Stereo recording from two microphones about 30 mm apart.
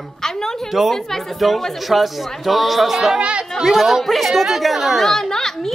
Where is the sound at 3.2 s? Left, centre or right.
Right.